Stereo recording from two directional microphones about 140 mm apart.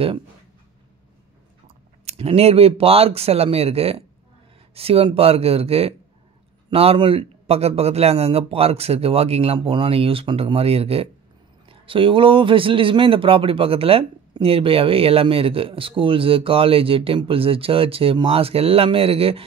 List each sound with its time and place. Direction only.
2.0 s a man's voice: 45° right (ahead or behind)